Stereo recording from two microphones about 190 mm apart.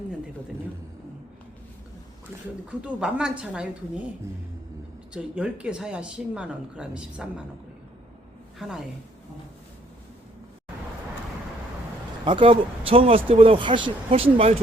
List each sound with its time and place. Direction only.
2.3 s speech: 10° right (ahead or behind)
5.1 s speech: 5° right (ahead or behind)
8.5 s a woman's voice: 5° right (ahead or behind)
12.2 s speech: 25° right (ahead or behind)